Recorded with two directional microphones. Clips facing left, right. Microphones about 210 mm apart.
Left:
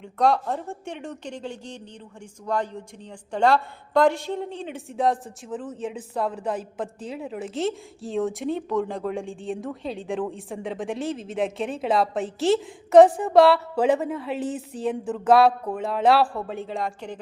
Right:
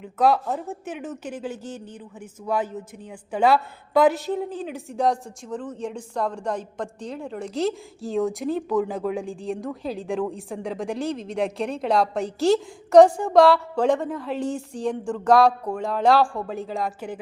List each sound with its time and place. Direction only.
0.0 s a woman's voice: 5° right (ahead or behind)